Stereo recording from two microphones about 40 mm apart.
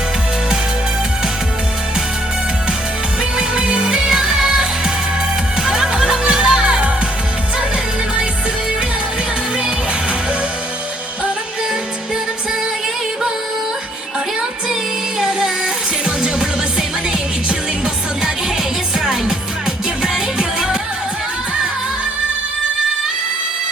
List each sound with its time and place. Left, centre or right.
3.3 s music: right
5.6 s music: centre
15.2 s music: centre
18.9 s music: centre